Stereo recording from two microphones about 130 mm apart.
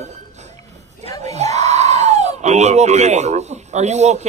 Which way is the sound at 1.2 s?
60° right (ahead or behind).